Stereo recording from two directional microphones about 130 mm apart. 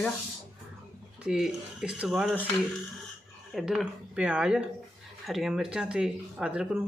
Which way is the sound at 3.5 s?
Centre (ahead or behind).